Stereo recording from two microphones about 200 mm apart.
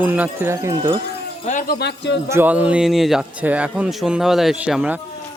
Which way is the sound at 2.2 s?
10° right (ahead or behind).